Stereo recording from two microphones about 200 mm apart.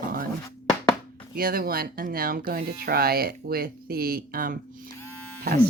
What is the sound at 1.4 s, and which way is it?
Speech, 45° right (ahead or behind).